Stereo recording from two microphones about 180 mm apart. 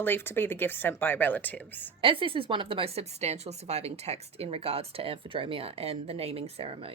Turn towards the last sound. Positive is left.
turn(degrees=-30)  # may be behind; listen again after turning